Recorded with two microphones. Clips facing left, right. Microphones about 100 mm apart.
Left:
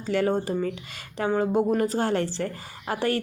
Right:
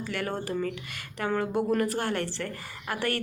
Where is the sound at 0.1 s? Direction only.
25° left (ahead or behind).